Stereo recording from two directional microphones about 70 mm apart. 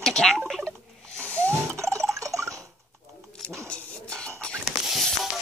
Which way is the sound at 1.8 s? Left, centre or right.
Right.